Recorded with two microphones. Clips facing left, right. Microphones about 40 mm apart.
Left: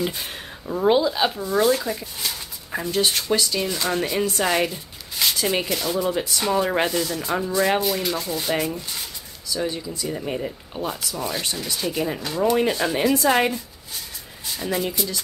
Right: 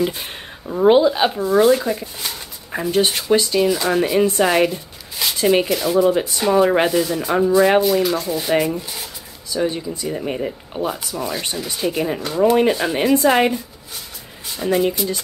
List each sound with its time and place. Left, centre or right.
0.7 s speech: right
3.6 s speech: centre
7.8 s speech: centre
9.5 s speech: right
14.6 s speech: centre